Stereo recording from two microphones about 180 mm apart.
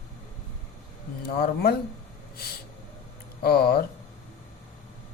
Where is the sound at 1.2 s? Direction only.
60° left (ahead or behind).